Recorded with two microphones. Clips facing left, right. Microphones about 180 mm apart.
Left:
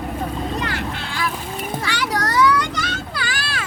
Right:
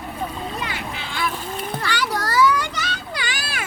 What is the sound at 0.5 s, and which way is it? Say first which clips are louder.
Boat: left 4 dB; 5° right (ahead or behind).